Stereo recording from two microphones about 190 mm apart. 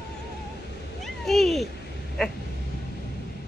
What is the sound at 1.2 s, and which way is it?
Cat, centre (ahead or behind).